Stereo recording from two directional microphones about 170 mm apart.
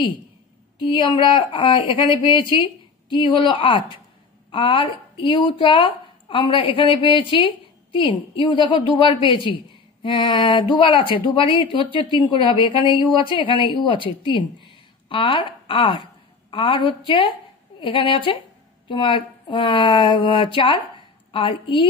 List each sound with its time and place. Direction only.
0.8 s a woman's voice: 30° left (ahead or behind)